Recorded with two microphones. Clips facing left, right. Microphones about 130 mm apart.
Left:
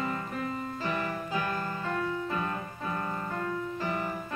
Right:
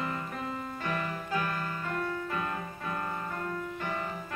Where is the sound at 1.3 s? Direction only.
30° left (ahead or behind).